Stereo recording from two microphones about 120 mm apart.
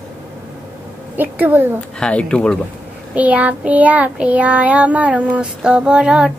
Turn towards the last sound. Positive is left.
turn(degrees=-10)  # may be behind; listen again after turning